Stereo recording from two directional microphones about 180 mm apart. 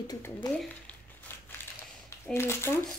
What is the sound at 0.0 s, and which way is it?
Speech, 20° left (ahead or behind).